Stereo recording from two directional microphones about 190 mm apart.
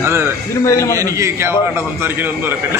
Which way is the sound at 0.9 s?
15° right (ahead or behind).